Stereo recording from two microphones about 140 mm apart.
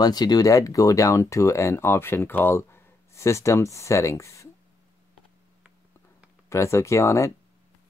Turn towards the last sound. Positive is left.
turn(degrees=20)  # may be behind; listen again after turning